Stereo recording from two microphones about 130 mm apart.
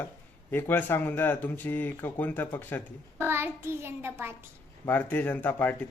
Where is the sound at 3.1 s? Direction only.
15° right (ahead or behind).